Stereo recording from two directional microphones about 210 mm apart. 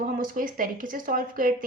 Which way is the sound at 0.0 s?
40° right (ahead or behind).